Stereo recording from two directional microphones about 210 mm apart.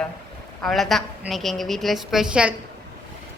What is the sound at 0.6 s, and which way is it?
A woman's voice, centre (ahead or behind).